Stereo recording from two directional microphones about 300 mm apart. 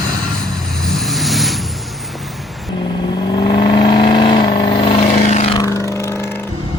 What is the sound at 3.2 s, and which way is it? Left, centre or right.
Vehicle, centre.